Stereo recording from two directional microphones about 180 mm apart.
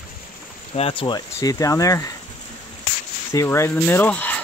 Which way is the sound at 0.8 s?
30° left (ahead or behind).